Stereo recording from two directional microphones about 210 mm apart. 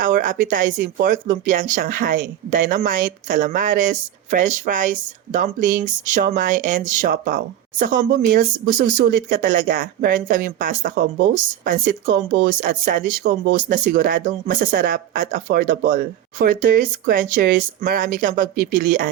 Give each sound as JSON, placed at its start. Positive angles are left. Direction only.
{"t": 0.0, "sound": "speech", "side_deg": -40}